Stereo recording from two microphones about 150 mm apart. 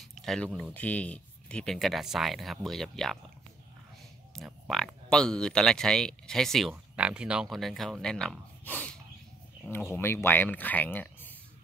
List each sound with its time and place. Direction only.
0.0 s speech: centre (ahead or behind)
4.3 s a sound: 5° left (ahead or behind)
4.6 s speech: centre (ahead or behind)
9.9 s speech: 15° left (ahead or behind)